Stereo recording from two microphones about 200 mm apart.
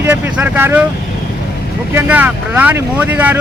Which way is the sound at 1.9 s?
10° right (ahead or behind).